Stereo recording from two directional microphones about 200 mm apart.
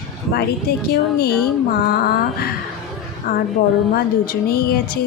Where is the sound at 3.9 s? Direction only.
50° left (ahead or behind).